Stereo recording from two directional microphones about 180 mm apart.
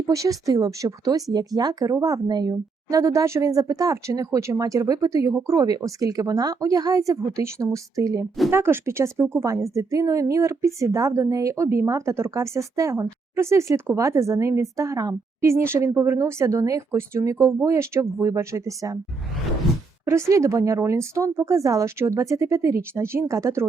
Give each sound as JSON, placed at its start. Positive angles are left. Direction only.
{"t": 0.0, "sound": "a woman's voice", "side_deg": -20}
{"t": 20.1, "sound": "a woman's voice", "side_deg": -15}